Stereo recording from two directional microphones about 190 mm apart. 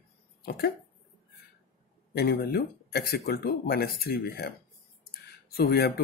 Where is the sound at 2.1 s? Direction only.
55° left (ahead or behind).